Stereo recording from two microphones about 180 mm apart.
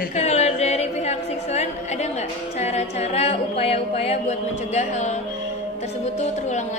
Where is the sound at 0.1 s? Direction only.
35° left (ahead or behind).